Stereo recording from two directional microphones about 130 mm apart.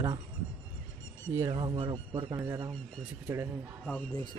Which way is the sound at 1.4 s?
40° right (ahead or behind).